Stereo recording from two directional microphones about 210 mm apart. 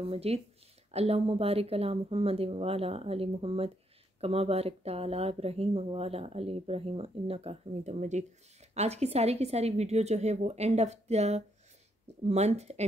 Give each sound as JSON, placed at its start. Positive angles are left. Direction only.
{"t": 0.0, "sound": "speech", "side_deg": -30}